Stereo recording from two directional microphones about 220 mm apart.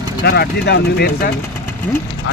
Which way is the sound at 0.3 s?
45° left (ahead or behind).